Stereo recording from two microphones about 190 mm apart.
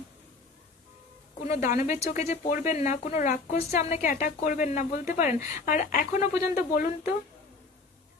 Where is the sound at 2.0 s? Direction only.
35° left (ahead or behind).